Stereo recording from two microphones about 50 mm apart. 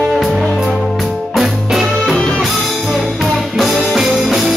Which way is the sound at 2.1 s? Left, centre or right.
Centre.